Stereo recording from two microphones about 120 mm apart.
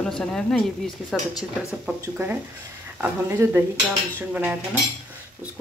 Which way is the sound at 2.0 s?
20° right (ahead or behind).